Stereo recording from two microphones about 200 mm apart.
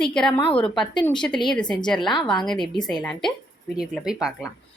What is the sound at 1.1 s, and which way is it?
A woman's voice, 5° left (ahead or behind).